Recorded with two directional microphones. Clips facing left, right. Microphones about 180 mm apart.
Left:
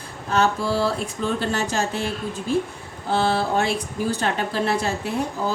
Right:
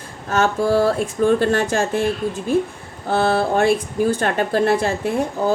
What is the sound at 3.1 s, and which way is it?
Speech, 50° right (ahead or behind).